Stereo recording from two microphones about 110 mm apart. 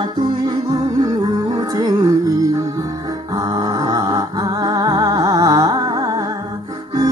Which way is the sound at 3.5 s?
35° right (ahead or behind).